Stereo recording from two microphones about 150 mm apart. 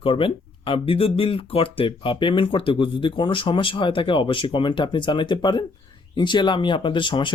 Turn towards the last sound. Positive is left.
turn(degrees=30)  # may be behind; listen again after turning